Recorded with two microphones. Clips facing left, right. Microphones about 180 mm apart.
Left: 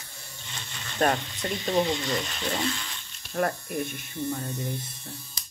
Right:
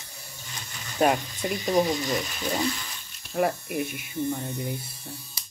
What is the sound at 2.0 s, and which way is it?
Speech, 5° right (ahead or behind).